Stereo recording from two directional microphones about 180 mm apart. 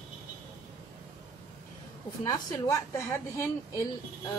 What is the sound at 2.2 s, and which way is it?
A woman's voice, 15° left (ahead or behind).